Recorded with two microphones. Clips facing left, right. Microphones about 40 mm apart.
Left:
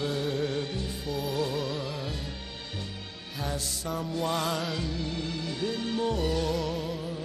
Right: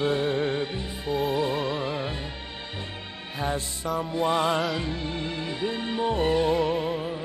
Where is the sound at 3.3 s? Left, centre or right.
Right.